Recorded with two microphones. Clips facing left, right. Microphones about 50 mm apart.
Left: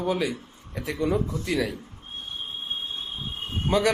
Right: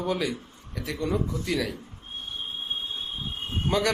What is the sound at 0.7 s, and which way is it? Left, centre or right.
Speech, left.